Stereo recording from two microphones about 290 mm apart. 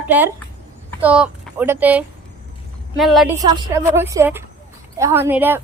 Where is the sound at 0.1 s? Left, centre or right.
Centre.